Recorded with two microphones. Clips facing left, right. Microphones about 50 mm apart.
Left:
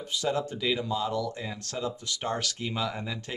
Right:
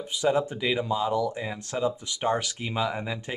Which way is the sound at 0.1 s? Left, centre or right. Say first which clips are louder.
Right 5 dB; centre.